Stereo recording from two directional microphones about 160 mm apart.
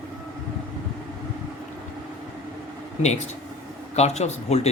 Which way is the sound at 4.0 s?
45° left (ahead or behind).